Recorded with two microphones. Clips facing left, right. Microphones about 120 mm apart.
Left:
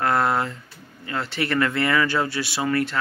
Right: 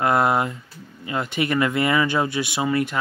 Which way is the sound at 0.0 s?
15° right (ahead or behind).